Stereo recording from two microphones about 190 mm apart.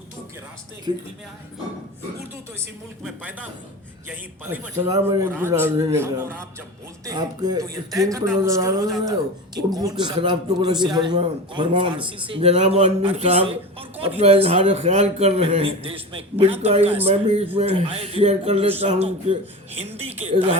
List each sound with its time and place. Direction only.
0.9 s a man's voice: 25° right (ahead or behind)
3.0 s a man's voice: 5° right (ahead or behind); by 20.5 s 30° right (ahead or behind)